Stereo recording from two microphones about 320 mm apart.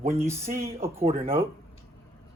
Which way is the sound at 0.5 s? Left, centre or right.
Right.